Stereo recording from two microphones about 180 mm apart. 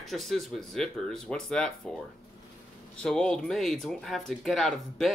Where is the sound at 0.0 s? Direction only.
Centre (ahead or behind).